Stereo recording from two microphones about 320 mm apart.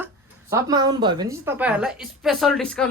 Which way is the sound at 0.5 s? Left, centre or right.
Centre.